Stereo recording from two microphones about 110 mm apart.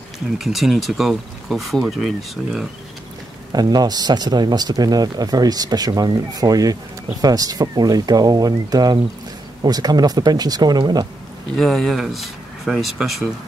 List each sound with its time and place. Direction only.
0.4 s speech: centre (ahead or behind)
3.5 s speech: 35° right (ahead or behind)
11.5 s speech: centre (ahead or behind)